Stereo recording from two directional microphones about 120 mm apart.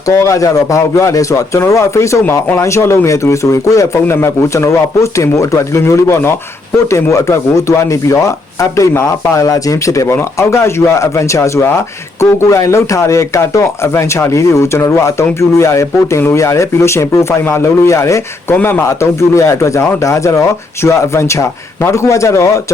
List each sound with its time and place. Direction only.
0.1 s speech: 25° left (ahead or behind)